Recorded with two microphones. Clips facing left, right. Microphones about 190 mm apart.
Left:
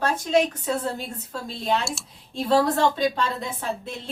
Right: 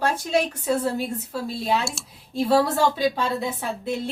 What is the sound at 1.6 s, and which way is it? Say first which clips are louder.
A woman's voice: left 1 dB; 5° right (ahead or behind).